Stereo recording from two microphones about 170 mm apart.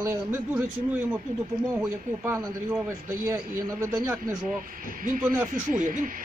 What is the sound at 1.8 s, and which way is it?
A man's voice, 10° right (ahead or behind).